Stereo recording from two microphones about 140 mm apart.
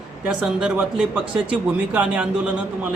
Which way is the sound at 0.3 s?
10° right (ahead or behind).